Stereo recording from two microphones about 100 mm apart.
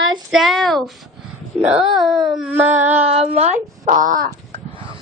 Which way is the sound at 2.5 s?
20° right (ahead or behind).